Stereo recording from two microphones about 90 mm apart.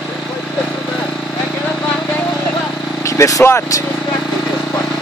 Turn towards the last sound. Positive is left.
turn(degrees=35)  # may be behind; listen again after turning